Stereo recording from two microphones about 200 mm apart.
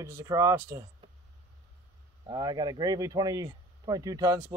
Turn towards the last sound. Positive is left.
turn(degrees=-20)  # may be behind; listen again after turning